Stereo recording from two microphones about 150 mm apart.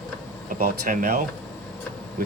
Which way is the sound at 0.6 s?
70° right (ahead or behind).